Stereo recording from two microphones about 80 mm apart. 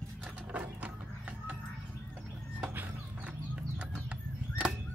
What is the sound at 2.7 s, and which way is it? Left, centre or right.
Music, right.